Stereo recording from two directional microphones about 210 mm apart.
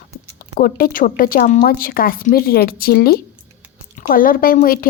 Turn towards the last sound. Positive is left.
turn(degrees=40)  # may be behind; listen again after turning